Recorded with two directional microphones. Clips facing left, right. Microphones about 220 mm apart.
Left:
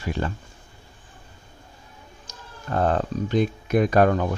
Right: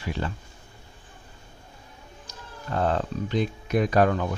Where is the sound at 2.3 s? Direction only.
50° left (ahead or behind).